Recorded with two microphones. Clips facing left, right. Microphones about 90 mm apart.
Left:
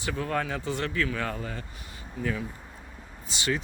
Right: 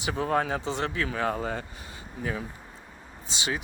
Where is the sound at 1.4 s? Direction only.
35° right (ahead or behind).